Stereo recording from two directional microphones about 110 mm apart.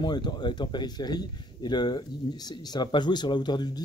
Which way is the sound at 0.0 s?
40° left (ahead or behind).